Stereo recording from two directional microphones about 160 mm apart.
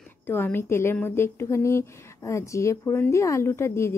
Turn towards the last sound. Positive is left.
turn(degrees=15)  # may be behind; listen again after turning